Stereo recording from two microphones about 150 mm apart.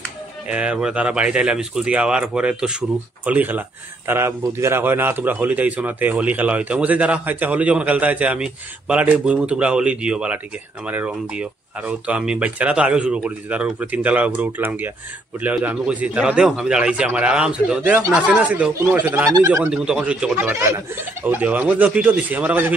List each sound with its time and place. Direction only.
0.5 s a man's voice: 5° right (ahead or behind)
19.3 s speech: 20° right (ahead or behind)
19.7 s a man's voice: 5° right (ahead or behind)